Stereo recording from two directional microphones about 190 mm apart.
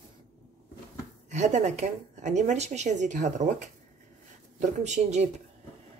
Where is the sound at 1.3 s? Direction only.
40° right (ahead or behind).